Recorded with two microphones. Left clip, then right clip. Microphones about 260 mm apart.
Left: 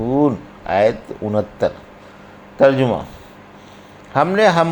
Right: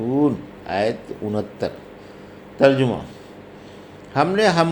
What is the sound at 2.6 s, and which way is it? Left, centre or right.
Speech, left.